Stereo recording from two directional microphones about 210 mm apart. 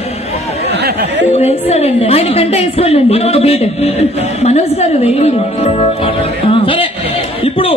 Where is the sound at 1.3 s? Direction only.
30° left (ahead or behind).